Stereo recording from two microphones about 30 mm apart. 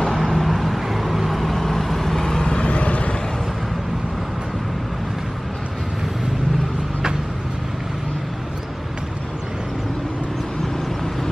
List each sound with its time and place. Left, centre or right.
0.0 s vehicle: centre
2.4 s vehicle: left
2.7 s vehicle: left